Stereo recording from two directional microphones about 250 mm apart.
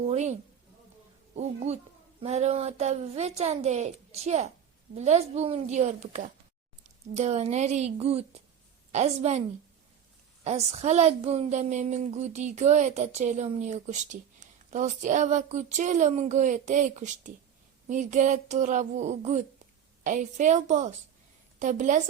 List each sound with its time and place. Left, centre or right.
0.1 s a woman's voice: right
1.4 s a woman's voice: right
10.4 s a woman's voice: right